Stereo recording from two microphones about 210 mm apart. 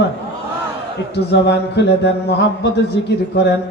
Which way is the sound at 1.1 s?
55° left (ahead or behind).